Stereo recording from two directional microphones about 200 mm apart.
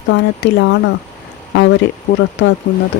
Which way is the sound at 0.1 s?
65° left (ahead or behind).